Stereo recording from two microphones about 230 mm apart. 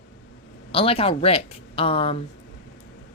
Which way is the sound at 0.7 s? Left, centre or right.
Left.